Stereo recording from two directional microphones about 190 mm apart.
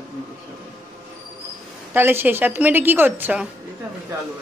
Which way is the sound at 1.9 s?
10° right (ahead or behind).